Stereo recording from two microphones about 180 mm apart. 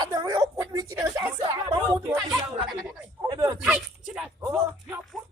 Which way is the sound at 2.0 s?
5° right (ahead or behind).